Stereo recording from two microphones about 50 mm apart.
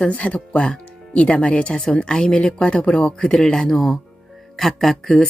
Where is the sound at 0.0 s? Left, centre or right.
Left.